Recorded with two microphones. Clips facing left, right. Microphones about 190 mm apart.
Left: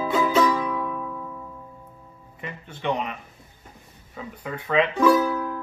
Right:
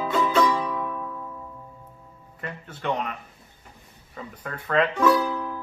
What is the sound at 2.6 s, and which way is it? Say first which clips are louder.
Speech: left 1 dB; 5° left (ahead or behind).